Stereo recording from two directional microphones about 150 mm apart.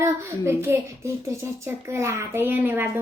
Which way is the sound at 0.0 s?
15° right (ahead or behind).